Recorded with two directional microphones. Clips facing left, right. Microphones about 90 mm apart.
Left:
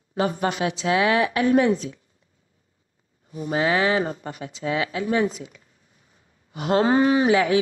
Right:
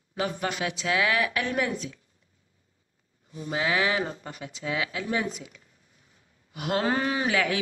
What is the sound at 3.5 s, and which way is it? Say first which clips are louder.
A woman's voice: left 5 dB; 35° left (ahead or behind).